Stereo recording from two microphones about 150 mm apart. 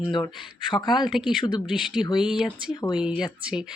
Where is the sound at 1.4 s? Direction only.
30° left (ahead or behind).